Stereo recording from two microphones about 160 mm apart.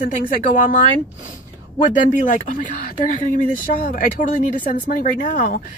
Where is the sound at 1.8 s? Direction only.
55° left (ahead or behind).